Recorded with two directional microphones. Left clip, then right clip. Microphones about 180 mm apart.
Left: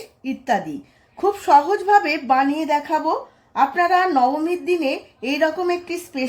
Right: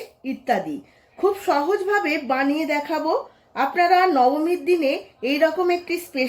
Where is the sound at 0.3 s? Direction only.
40° left (ahead or behind).